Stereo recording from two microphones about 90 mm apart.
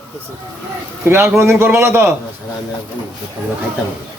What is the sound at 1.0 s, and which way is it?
A man's voice, 25° right (ahead or behind).